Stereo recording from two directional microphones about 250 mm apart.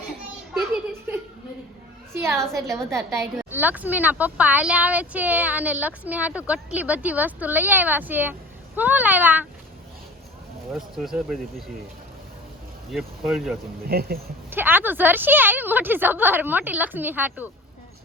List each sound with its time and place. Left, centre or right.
2.1 s a sound: centre
2.4 s speech: centre
2.9 s a woman's voice: centre
10.7 s speech: centre
12.9 s speech: centre
13.8 s speech: right
14.5 s a woman's voice: centre